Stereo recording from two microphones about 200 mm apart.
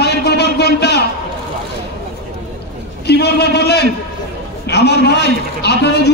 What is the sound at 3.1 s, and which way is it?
A man's voice, 55° left (ahead or behind).